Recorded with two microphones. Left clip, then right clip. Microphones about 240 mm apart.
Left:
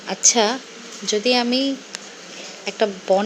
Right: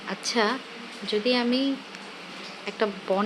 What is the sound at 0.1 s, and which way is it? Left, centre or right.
A woman's voice, centre.